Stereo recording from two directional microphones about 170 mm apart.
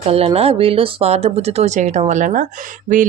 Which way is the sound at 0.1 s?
35° right (ahead or behind).